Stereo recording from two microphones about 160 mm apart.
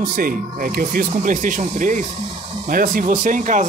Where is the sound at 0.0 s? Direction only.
60° right (ahead or behind).